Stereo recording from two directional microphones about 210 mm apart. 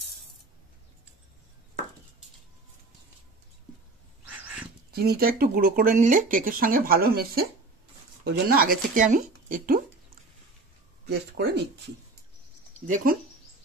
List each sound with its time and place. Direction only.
4.4 s dog: 5° right (ahead or behind)
4.9 s speech: 45° right (ahead or behind)
11.1 s speech: 50° right (ahead or behind)
12.8 s speech: 40° right (ahead or behind)